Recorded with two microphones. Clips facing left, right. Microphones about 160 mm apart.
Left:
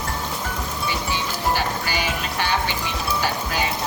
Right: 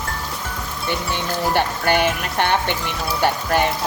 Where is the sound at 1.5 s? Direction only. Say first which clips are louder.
Right 7 dB; 60° right (ahead or behind).